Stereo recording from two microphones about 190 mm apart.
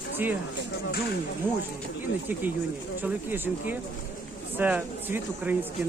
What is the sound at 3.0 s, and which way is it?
Speech, 10° right (ahead or behind).